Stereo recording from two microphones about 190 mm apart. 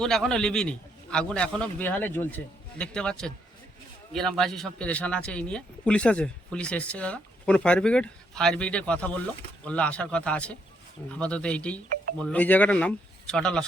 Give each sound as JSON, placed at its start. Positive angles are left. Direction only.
{"t": 0.0, "sound": "a man's voice", "side_deg": 5}